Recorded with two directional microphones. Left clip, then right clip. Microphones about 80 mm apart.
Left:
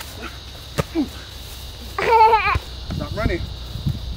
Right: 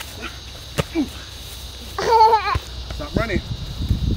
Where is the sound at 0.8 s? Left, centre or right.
Centre.